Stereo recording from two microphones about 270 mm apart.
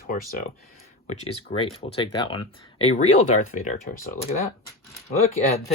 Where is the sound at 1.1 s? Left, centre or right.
Left.